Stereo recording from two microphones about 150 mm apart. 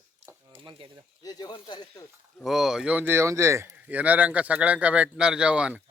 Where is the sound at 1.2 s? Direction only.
25° left (ahead or behind).